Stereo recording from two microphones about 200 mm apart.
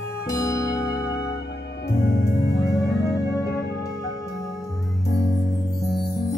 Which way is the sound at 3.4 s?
55° left (ahead or behind).